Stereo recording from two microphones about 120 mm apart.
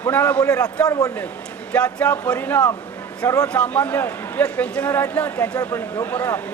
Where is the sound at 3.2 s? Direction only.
30° left (ahead or behind).